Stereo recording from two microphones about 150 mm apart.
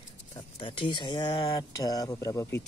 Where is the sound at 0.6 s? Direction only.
35° left (ahead or behind).